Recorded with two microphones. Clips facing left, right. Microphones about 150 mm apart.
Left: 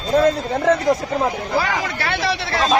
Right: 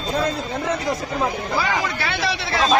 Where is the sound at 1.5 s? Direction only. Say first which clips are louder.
Even; 50° left (ahead or behind).